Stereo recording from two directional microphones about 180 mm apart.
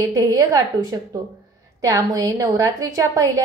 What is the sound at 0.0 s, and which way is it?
A woman's voice, 20° right (ahead or behind).